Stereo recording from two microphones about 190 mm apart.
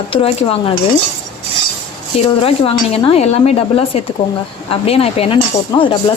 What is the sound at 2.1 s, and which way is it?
Speech, 30° left (ahead or behind).